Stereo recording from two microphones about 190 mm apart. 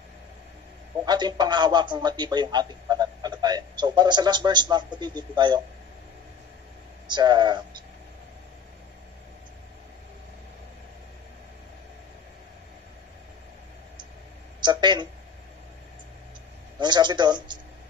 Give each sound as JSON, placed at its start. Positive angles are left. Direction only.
{"t": 1.0, "sound": "a man's voice", "side_deg": -20}
{"t": 7.1, "sound": "a man's voice", "side_deg": -25}
{"t": 14.6, "sound": "speech", "side_deg": -25}
{"t": 16.8, "sound": "a man's voice", "side_deg": -25}